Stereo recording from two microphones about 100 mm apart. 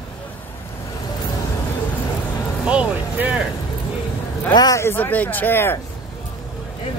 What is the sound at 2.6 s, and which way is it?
Speech, 10° right (ahead or behind).